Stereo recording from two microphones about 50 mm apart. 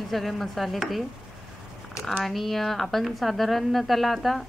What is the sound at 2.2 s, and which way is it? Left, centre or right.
Speech, centre.